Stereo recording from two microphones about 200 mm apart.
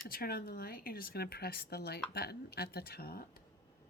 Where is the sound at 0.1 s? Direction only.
50° left (ahead or behind).